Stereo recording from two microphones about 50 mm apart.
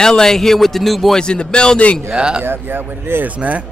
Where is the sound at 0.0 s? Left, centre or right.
Centre.